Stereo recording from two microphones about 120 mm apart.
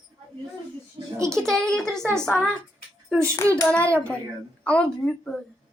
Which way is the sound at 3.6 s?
10° left (ahead or behind).